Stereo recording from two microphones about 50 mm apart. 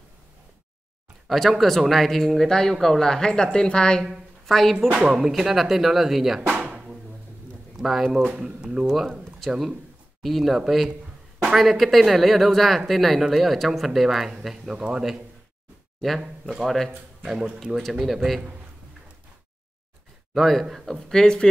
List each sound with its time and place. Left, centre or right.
1.5 s a woman's voice: centre
4.5 s speech: centre
4.7 s speech: right
5.2 s speech: centre
6.6 s music: centre
7.7 s speech: centre
8.4 s speech: centre
16.6 s speech: centre
20.3 s speech: centre
21.1 s a woman's voice: centre